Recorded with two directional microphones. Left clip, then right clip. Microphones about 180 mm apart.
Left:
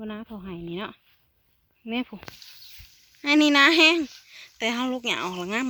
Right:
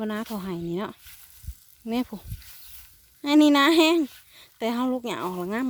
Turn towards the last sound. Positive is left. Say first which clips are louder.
# left 1 dB
turn(degrees=-10)  # may be behind; listen again after turning